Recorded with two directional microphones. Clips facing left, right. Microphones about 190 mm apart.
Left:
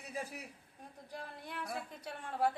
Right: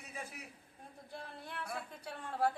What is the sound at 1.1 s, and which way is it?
Speech, 15° left (ahead or behind).